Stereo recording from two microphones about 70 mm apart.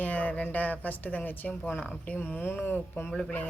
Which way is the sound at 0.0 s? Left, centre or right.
Left.